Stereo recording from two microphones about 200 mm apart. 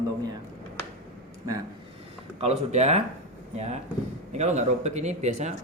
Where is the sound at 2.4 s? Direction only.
35° right (ahead or behind).